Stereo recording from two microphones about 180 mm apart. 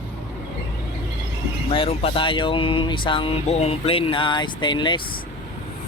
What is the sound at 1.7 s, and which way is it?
Speech, 30° left (ahead or behind).